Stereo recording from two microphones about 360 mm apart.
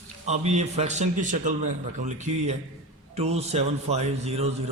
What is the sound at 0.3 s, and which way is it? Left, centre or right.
A man's voice, centre.